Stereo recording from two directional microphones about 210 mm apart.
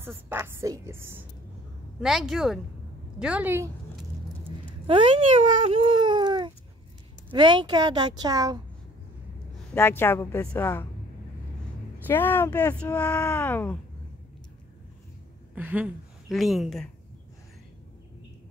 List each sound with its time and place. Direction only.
0.0 s a woman's voice: 10° right (ahead or behind)
4.8 s a woman's voice: 25° right (ahead or behind)
9.8 s speech: 10° left (ahead or behind)
12.1 s speech: 10° left (ahead or behind)
15.5 s a woman's voice: 5° right (ahead or behind)